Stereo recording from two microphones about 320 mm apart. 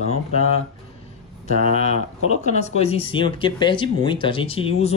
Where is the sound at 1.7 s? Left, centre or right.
Centre.